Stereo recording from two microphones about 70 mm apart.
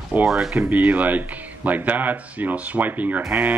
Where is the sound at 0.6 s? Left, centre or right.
Right.